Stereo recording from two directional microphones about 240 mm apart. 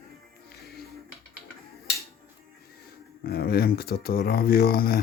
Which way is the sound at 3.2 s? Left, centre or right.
Left.